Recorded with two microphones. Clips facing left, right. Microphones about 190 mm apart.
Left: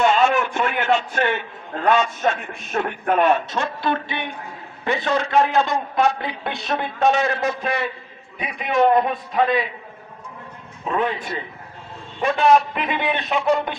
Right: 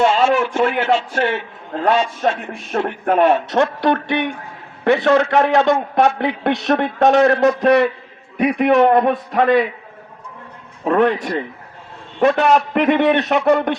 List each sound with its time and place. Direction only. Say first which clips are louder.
0.0 s a man's voice: right 3 dB; 30° right (ahead or behind)
3.5 s a man's voice: right 7 dB; 70° right (ahead or behind)
10.8 s a man's voice: right 8 dB; 65° right (ahead or behind)